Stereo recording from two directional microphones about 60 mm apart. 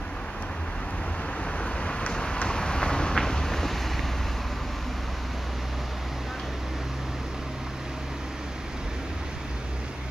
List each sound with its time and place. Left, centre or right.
1.6 s vehicle: centre